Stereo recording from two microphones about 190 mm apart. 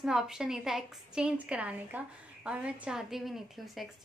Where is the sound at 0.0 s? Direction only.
5° right (ahead or behind).